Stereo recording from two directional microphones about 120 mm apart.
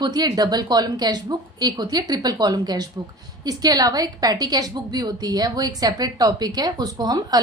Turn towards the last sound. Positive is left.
turn(degrees=-35)  # may be behind; listen again after turning